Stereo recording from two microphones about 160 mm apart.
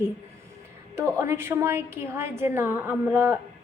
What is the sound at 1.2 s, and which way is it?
A woman's voice, 15° right (ahead or behind).